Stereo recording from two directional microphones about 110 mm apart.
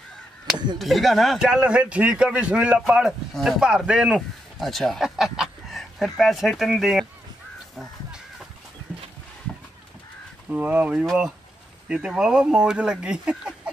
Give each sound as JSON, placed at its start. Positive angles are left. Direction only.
{"t": 0.7, "sound": "a man's voice", "side_deg": 0}
{"t": 10.5, "sound": "a man's voice", "side_deg": -15}
{"t": 11.1, "sound": "a man's voice", "side_deg": 0}